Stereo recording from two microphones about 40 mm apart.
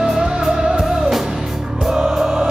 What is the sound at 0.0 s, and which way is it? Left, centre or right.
Music, centre.